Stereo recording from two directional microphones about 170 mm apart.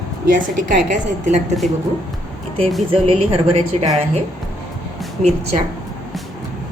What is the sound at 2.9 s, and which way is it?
A woman's voice, 35° right (ahead or behind).